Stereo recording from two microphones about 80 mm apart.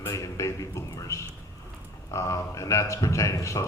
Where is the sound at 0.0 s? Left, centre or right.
Left.